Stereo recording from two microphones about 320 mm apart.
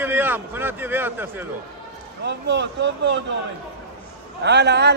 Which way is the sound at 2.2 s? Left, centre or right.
Right.